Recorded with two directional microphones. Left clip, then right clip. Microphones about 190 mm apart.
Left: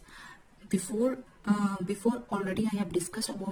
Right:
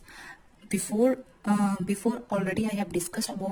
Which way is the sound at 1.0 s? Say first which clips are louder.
Right 8 dB; 40° right (ahead or behind).